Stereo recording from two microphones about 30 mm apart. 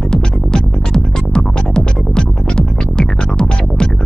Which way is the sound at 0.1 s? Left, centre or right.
Left.